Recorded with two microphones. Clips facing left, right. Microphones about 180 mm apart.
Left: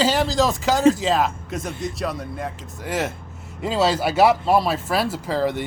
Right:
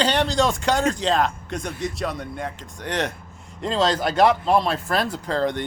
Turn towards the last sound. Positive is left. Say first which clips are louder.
# left 1 dB
turn(degrees=5)  # may be behind; listen again after turning